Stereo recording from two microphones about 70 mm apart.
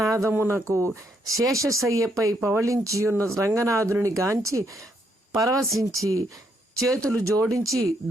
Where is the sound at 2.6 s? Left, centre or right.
Right.